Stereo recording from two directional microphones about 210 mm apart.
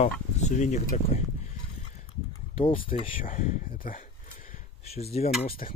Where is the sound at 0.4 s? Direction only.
35° left (ahead or behind).